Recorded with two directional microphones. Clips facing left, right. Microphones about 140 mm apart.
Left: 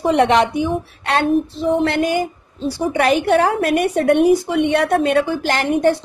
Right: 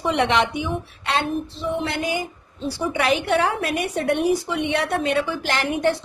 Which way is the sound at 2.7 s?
40° left (ahead or behind).